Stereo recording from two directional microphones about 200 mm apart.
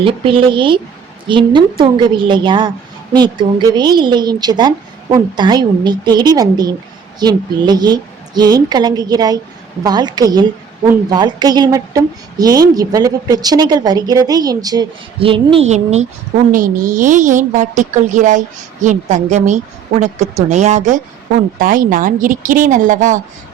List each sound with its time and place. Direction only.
0.0 s a woman's voice: 25° right (ahead or behind)